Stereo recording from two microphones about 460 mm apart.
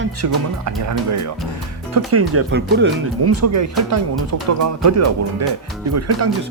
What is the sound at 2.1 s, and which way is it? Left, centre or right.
Speech, right.